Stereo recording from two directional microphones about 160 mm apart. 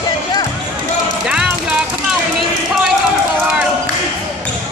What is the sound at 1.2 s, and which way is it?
Music, 5° right (ahead or behind).